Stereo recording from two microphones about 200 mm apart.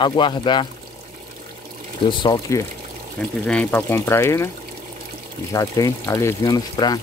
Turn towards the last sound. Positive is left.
turn(degrees=20)  # may be behind; listen again after turning